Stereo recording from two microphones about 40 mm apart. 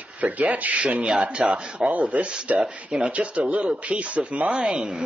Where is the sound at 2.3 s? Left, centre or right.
Right.